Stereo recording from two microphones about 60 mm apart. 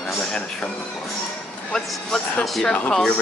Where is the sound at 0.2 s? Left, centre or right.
Centre.